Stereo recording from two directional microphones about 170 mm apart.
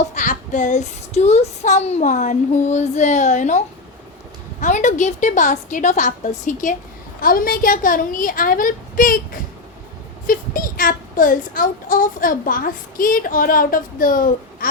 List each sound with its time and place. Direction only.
0.1 s child singing: 45° left (ahead or behind)
4.6 s child singing: 45° left (ahead or behind)
7.2 s speech: 55° left (ahead or behind)